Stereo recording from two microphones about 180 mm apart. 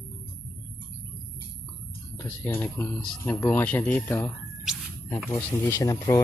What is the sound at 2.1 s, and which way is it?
Speech, 10° left (ahead or behind).